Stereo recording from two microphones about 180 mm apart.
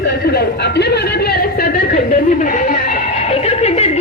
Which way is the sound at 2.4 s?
45° left (ahead or behind).